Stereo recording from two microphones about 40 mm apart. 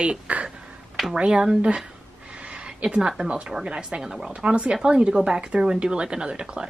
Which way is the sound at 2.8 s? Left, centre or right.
Right.